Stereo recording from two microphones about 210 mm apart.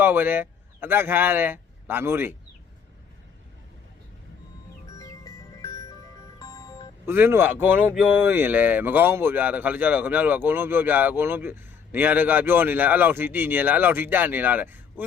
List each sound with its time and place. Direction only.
0.0 s speech: 10° right (ahead or behind)
4.9 s music: 15° left (ahead or behind)
7.0 s speech: 10° right (ahead or behind)